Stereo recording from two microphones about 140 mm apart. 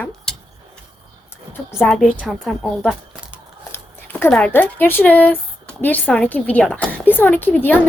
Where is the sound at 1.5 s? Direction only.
15° left (ahead or behind).